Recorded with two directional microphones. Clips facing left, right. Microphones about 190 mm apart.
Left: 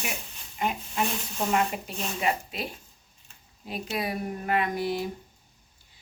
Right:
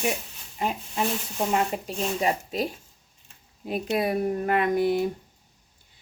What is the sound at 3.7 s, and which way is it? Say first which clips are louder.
Speech: right 6 dB; 50° right (ahead or behind).